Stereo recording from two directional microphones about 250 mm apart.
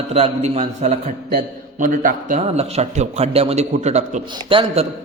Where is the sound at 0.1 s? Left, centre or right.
Right.